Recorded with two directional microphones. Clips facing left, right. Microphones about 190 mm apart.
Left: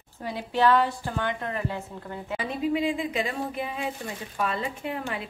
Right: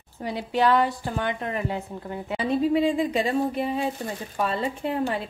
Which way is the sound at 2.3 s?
35° right (ahead or behind).